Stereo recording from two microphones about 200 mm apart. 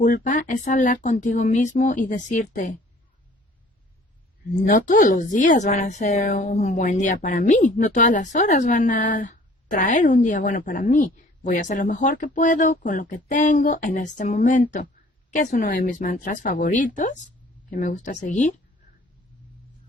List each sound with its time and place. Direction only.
0.0 s a woman's voice: 40° left (ahead or behind)
4.6 s a woman's voice: 40° left (ahead or behind)